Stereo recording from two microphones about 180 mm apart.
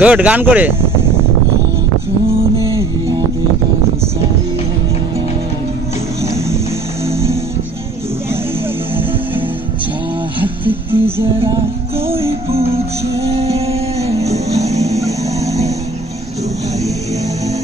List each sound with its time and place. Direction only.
0.0 s speech: 5° right (ahead or behind)
2.6 s music: 15° right (ahead or behind)
7.1 s music: 15° right (ahead or behind)
10.4 s music: 10° right (ahead or behind)
12.3 s music: 35° right (ahead or behind)
14.6 s a sound: 20° right (ahead or behind)